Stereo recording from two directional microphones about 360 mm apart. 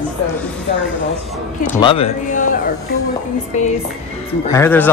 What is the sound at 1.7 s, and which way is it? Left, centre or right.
A man's voice, centre.